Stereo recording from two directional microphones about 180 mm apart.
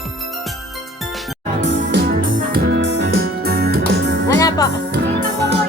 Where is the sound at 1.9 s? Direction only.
60° right (ahead or behind).